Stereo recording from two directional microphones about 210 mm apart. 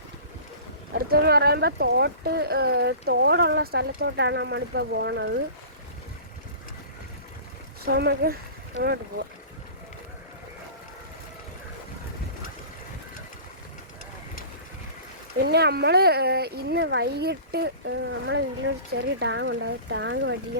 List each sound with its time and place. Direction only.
0.9 s speech: 45° right (ahead or behind)
7.9 s speech: 50° right (ahead or behind)
15.4 s speech: 50° right (ahead or behind)